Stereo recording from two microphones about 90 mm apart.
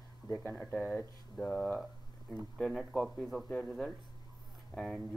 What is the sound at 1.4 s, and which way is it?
Speech, 5° left (ahead or behind).